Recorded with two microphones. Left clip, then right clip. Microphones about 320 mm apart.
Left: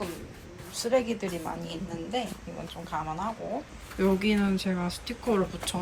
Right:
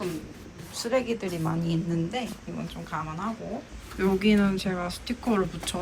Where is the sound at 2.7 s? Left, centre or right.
Centre.